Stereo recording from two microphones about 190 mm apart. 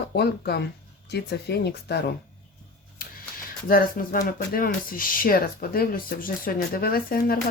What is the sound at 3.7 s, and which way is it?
Speech, 50° left (ahead or behind).